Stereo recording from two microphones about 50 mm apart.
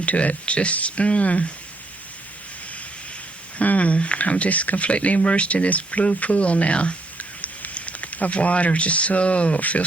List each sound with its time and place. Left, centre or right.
0.0 s speech: left
3.6 s speech: left